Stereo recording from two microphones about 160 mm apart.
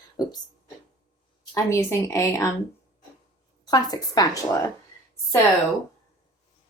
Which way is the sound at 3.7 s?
25° left (ahead or behind).